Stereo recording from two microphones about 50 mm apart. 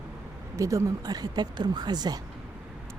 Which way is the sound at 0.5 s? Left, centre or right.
Right.